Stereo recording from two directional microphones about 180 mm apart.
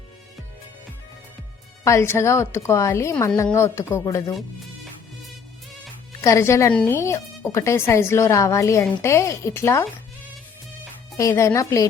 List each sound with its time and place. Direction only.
1.8 s speech: 15° left (ahead or behind)
6.2 s speech: 15° left (ahead or behind)
11.2 s speech: 15° left (ahead or behind)